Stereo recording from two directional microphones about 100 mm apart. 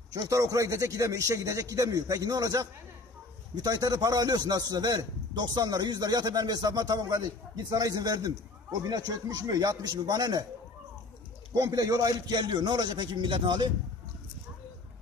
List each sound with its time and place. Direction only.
0.2 s a man's voice: 35° right (ahead or behind)
11.5 s a man's voice: 35° right (ahead or behind); by 13.7 s 55° right (ahead or behind)